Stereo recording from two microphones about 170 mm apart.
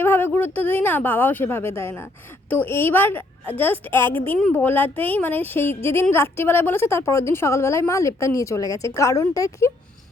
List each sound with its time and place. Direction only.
0.0 s a woman's voice: 10° left (ahead or behind)